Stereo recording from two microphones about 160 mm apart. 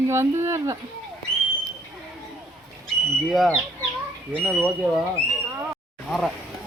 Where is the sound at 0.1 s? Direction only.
15° right (ahead or behind).